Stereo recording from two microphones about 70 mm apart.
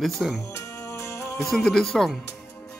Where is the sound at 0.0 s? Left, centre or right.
Centre.